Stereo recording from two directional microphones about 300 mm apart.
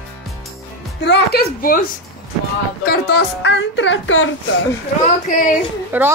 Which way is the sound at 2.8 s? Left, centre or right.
Left.